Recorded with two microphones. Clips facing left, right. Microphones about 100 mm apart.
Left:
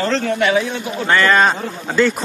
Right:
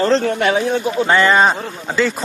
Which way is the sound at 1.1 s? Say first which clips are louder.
Even; 15° right (ahead or behind).